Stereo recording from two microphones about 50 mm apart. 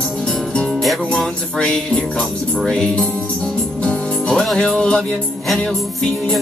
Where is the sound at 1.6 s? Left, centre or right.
Left.